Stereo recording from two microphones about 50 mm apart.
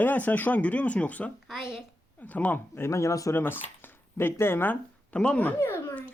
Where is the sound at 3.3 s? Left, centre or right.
Left.